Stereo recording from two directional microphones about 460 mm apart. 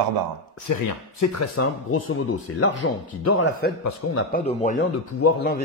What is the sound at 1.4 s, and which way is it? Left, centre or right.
Speech, left.